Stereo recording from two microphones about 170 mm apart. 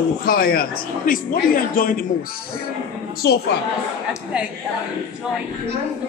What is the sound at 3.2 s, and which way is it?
Speech, 70° left (ahead or behind).